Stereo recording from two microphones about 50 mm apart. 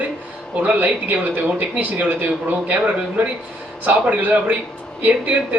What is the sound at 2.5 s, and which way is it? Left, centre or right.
A man's voice, right.